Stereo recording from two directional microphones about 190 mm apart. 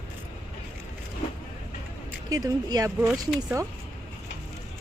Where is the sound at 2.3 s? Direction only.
20° right (ahead or behind).